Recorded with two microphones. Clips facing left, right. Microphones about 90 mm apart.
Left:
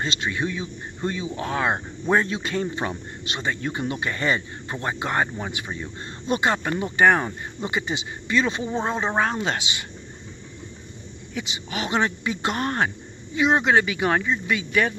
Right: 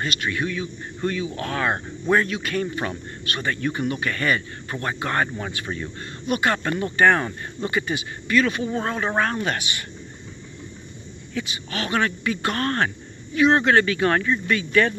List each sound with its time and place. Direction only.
0.0 s speech: 25° left (ahead or behind)
11.3 s speech: 20° left (ahead or behind)